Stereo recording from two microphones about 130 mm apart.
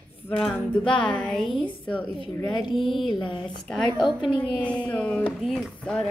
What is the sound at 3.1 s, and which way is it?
Speech, 40° left (ahead or behind).